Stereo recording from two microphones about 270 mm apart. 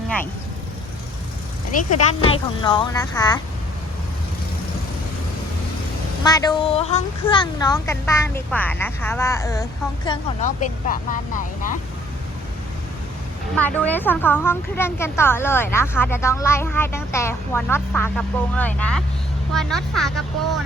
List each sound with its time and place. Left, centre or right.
2.0 s a woman's voice: left
6.2 s a woman's voice: centre
10.1 s speech: left
13.6 s a woman's voice: centre